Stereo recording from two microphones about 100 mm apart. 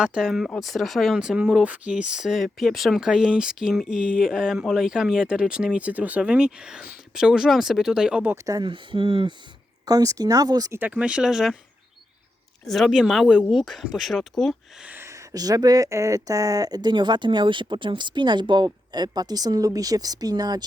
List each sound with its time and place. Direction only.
0.0 s speech: 5° right (ahead or behind)
8.6 s speech: 55° right (ahead or behind)
9.8 s speech: 40° right (ahead or behind)
10.7 s speech: 15° right (ahead or behind)
12.6 s speech: centre (ahead or behind)
14.8 s speech: 25° right (ahead or behind); by 20.7 s 40° right (ahead or behind)